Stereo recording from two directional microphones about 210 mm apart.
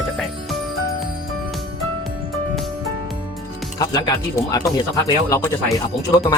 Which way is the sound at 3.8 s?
15° left (ahead or behind).